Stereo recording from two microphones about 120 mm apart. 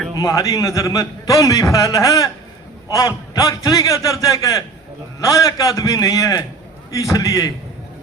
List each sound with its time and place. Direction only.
0.2 s a man's voice: 25° left (ahead or behind)